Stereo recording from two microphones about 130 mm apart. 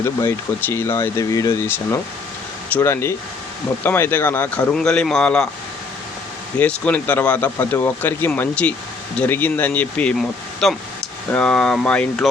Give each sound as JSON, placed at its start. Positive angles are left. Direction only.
{"t": 0.0, "sound": "speech", "side_deg": 20}
{"t": 6.6, "sound": "speech", "side_deg": 10}